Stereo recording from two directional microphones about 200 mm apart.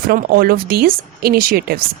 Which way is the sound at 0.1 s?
50° right (ahead or behind).